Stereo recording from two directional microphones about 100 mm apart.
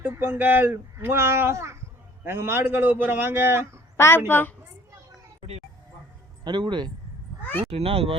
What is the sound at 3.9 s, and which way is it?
Speech, 25° left (ahead or behind).